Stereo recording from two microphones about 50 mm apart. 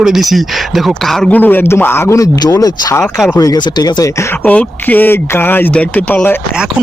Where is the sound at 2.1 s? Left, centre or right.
Left.